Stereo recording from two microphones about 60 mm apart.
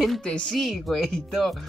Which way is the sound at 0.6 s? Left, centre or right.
Centre.